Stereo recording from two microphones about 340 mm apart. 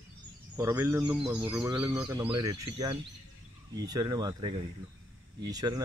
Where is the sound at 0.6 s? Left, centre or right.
Centre.